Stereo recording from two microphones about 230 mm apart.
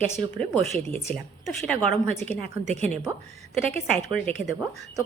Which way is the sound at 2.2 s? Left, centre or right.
Right.